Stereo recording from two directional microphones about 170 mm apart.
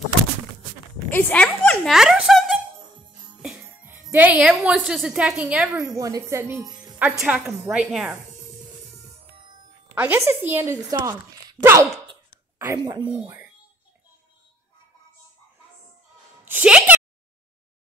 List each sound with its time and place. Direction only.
1.1 s speech: 10° left (ahead or behind)
2.0 s a sound: centre (ahead or behind)
3.4 s speech: 10° right (ahead or behind)
5.7 s speech: 20° right (ahead or behind)
7.0 s a woman's voice: 10° right (ahead or behind)
9.9 s speech: 15° right (ahead or behind)
12.7 s speech: 25° right (ahead or behind)
16.4 s a sound: 10° right (ahead or behind)